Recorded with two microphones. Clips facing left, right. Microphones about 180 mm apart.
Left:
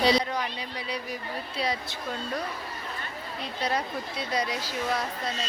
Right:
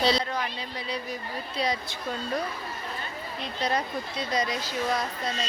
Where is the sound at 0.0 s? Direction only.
15° left (ahead or behind).